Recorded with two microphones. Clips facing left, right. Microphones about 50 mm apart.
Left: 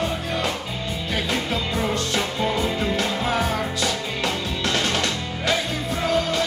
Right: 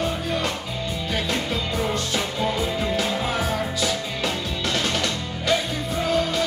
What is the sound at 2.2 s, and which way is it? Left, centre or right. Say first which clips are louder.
Music: left 2 dB; centre.